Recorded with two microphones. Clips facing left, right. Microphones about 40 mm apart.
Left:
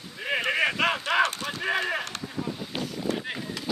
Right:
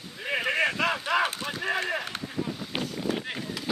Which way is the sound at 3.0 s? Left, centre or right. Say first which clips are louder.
Left 2 dB; centre.